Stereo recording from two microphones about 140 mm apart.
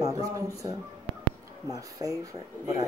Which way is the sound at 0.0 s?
25° right (ahead or behind).